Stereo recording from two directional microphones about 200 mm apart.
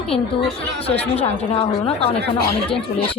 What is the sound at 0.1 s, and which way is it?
Speech, 25° left (ahead or behind).